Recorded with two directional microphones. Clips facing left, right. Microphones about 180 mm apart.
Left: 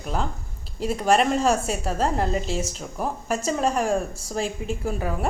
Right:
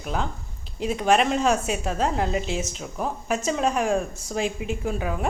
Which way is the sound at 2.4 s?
35° left (ahead or behind).